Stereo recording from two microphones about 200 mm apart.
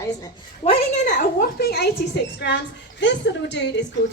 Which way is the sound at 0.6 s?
35° left (ahead or behind).